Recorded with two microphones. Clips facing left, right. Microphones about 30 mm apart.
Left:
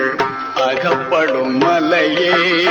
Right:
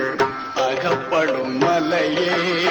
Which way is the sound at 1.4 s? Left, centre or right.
Left.